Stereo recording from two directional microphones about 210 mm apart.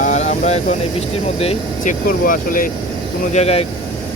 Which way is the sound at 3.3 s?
30° left (ahead or behind).